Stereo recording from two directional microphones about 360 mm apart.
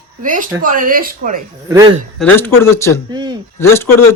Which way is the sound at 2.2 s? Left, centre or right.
Centre.